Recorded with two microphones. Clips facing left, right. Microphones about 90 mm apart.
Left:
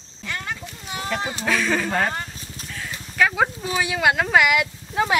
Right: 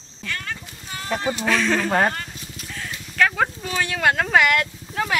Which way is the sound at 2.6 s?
Centre (ahead or behind).